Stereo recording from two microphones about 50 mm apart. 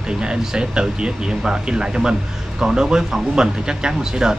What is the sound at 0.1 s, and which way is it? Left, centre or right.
Speech, centre.